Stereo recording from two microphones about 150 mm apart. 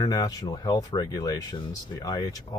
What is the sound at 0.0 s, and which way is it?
Speech, 25° left (ahead or behind).